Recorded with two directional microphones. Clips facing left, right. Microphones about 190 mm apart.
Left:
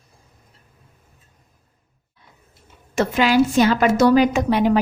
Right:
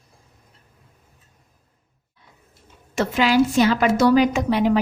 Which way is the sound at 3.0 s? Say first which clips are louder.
Left 1 dB; 50° left (ahead or behind).